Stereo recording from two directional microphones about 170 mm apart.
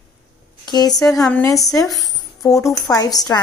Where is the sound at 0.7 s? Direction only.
25° left (ahead or behind).